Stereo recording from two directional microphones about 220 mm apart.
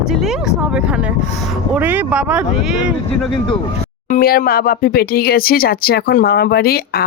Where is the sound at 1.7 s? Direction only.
5° right (ahead or behind).